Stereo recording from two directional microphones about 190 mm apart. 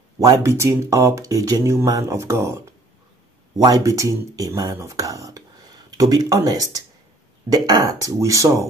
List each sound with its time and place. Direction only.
0.2 s speech: 15° right (ahead or behind)